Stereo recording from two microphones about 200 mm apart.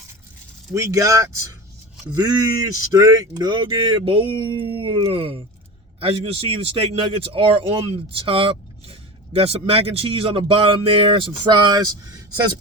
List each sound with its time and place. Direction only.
0.7 s a man's voice: 15° right (ahead or behind)